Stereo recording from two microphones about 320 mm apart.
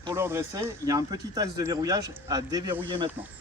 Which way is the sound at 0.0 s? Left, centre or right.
Centre.